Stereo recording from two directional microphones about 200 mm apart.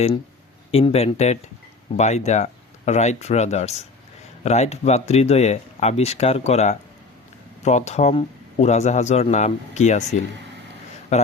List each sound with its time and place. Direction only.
0.7 s speech: 30° left (ahead or behind)